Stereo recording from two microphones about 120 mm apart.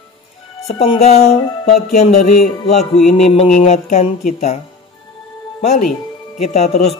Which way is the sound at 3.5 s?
70° left (ahead or behind).